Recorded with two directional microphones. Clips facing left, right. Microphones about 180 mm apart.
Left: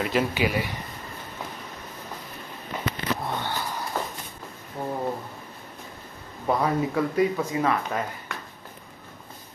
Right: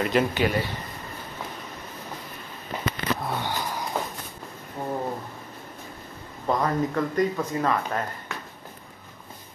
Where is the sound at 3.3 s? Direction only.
10° right (ahead or behind).